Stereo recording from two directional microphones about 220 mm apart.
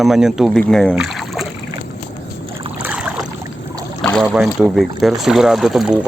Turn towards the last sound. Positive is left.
turn(degrees=0)  # may be behind; listen again after turning